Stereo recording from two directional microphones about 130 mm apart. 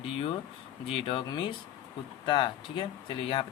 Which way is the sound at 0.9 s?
40° left (ahead or behind).